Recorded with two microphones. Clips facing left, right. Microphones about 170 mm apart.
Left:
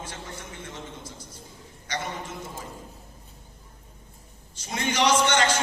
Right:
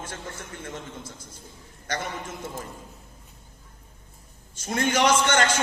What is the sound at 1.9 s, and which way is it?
Speech, 50° right (ahead or behind).